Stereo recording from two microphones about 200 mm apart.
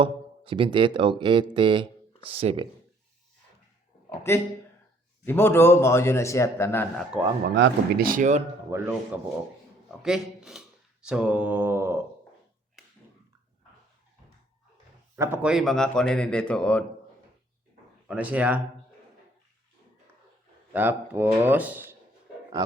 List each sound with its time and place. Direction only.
0.0 s speech: 25° right (ahead or behind)
4.3 s a man's voice: 15° left (ahead or behind)
7.5 s speech: 50° right (ahead or behind)
8.7 s speech: 15° right (ahead or behind)
10.0 s speech: 5° right (ahead or behind)
15.1 s speech: 10° right (ahead or behind); by 16.8 s 5° left (ahead or behind)
18.1 s speech: 5° right (ahead or behind)
20.7 s speech: 10° right (ahead or behind)